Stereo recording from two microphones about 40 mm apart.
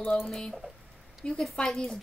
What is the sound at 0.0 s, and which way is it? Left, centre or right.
Speech, left.